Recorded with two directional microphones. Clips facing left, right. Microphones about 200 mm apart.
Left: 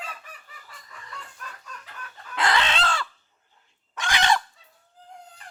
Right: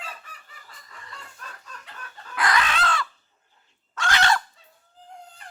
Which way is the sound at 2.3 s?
25° left (ahead or behind).